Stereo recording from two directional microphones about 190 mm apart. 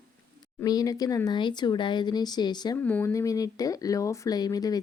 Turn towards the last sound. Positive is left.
turn(degrees=20)  # may be behind; listen again after turning